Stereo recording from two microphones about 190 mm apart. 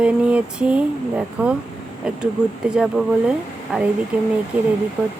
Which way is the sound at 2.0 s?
5° right (ahead or behind).